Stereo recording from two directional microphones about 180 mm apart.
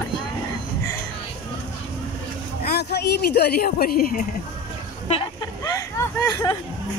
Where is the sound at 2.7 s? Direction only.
65° left (ahead or behind).